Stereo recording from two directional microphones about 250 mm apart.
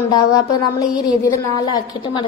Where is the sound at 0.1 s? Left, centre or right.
Centre.